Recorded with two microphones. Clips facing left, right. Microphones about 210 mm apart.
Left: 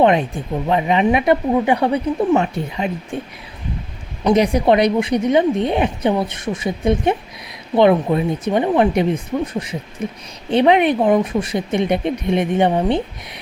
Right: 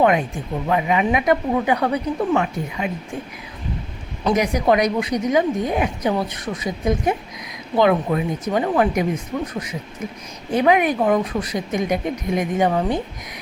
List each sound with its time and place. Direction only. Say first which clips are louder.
0.7 s speech: left 3 dB; 30° left (ahead or behind)
4.4 s a woman's voice: left 3 dB; 30° left (ahead or behind)